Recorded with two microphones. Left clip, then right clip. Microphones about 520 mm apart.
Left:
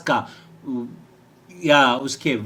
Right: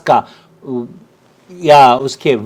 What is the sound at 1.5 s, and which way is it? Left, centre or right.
Speech, right.